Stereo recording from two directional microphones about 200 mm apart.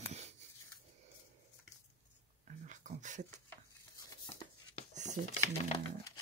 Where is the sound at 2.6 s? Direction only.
40° right (ahead or behind).